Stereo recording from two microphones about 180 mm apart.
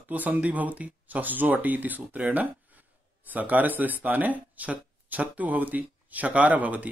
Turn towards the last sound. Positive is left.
turn(degrees=-10)  # may be behind; listen again after turning